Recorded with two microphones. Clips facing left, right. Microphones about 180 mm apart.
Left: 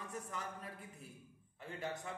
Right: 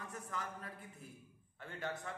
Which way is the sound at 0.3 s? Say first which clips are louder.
Right 1 dB; 15° left (ahead or behind).